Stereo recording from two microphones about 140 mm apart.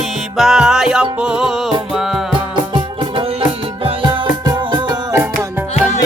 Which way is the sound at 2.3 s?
35° right (ahead or behind).